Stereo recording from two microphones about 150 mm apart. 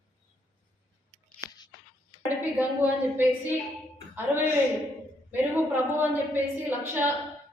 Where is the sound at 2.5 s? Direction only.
10° right (ahead or behind).